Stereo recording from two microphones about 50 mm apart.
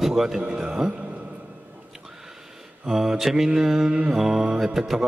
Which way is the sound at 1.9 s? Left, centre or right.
Centre.